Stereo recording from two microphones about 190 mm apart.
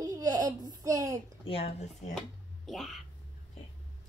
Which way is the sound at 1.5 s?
30° left (ahead or behind).